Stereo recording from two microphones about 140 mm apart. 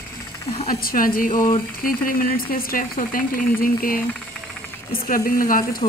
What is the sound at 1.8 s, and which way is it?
Speech, 90° left.